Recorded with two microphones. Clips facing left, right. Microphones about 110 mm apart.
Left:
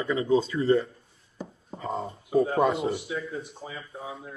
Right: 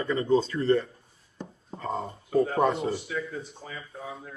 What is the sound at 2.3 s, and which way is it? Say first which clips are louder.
Speech: left 1 dB; 5° left (ahead or behind).